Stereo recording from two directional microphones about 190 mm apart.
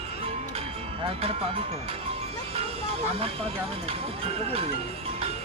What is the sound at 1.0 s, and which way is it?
Speech, 30° right (ahead or behind).